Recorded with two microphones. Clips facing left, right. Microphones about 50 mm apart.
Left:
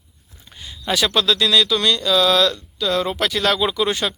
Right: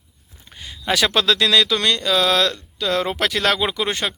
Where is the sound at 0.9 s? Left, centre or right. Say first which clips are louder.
Right 1 dB; right.